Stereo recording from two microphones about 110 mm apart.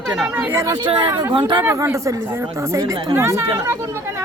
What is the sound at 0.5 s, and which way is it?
Speech, 35° right (ahead or behind).